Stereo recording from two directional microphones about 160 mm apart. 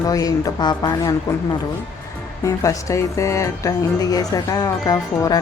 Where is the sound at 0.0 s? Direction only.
25° left (ahead or behind).